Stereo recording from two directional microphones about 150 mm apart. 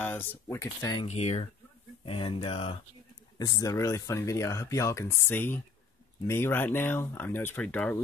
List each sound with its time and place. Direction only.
0.0 s speech: 15° left (ahead or behind)
1.0 s speech: 50° left (ahead or behind)
2.0 s speech: 35° left (ahead or behind)
3.3 s speech: 25° left (ahead or behind)